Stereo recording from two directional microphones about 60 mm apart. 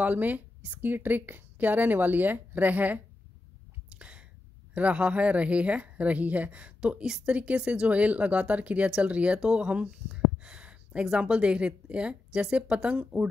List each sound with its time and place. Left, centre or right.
0.0 s a woman's voice: right
3.9 s a sound: centre
4.7 s a woman's voice: right
6.8 s a woman's voice: centre